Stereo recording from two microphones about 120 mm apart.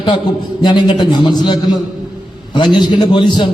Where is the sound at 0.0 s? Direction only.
40° left (ahead or behind).